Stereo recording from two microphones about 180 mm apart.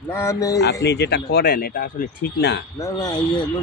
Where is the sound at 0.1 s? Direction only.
15° left (ahead or behind).